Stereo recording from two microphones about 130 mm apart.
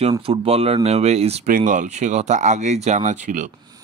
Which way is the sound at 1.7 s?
70° right (ahead or behind).